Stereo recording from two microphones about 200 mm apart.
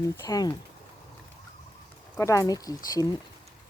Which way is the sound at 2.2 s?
15° left (ahead or behind).